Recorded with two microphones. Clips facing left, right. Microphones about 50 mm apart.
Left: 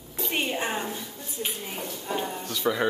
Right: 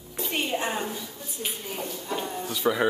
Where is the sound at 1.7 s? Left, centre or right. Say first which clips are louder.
Even; left.